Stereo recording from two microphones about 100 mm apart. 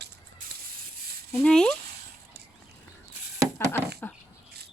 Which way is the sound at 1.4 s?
5° left (ahead or behind).